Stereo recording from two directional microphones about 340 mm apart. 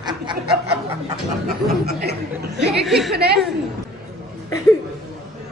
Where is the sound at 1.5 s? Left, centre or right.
Right.